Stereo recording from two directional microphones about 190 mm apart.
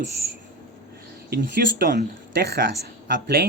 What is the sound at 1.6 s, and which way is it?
Speech, 55° right (ahead or behind).